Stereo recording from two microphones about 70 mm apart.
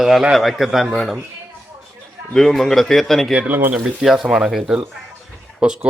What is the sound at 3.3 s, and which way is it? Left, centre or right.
Speech, right.